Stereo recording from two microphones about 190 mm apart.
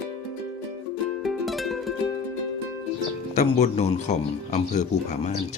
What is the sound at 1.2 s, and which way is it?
Music, centre (ahead or behind).